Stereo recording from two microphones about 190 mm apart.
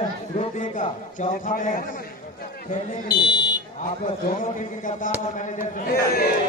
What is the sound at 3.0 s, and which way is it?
Speech, 20° left (ahead or behind).